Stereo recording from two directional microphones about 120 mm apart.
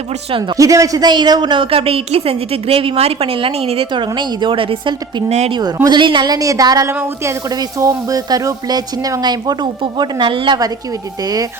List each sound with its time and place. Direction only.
0.5 s a woman's voice: 25° right (ahead or behind); by 3.8 s 55° right (ahead or behind)
3.9 s a woman's voice: 40° right (ahead or behind)
5.5 s a woman's voice: 35° right (ahead or behind)